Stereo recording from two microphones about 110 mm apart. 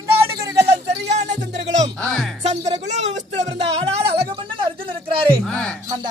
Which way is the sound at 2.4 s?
85° right.